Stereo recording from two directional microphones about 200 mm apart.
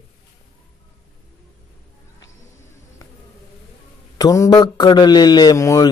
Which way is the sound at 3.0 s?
15° left (ahead or behind).